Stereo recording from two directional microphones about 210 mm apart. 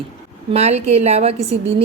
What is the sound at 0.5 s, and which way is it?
Speech, 30° right (ahead or behind).